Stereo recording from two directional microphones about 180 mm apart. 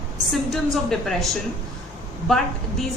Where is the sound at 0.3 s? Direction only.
Centre (ahead or behind).